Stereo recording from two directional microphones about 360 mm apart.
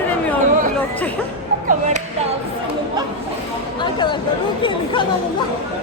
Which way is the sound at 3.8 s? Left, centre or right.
Centre.